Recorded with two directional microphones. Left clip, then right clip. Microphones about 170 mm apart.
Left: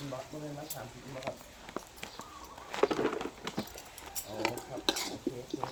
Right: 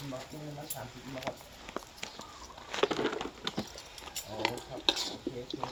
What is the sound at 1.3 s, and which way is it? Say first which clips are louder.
Speech: right 1 dB; 50° right (ahead or behind).